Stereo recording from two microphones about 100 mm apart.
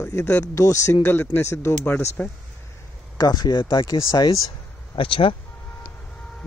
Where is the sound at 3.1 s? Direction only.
40° left (ahead or behind).